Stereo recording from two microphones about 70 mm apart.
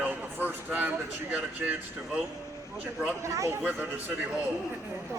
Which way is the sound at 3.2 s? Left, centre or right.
Right.